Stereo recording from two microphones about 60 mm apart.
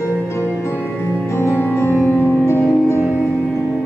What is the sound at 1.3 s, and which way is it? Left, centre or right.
Music, left.